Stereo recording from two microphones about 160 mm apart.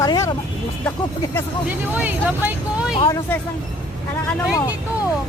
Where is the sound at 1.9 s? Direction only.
10° right (ahead or behind).